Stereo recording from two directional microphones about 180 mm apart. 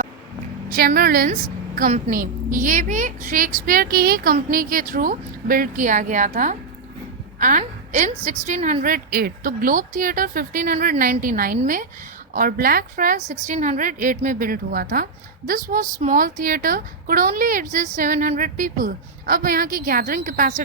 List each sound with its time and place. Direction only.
0.7 s a woman's voice: 55° right (ahead or behind)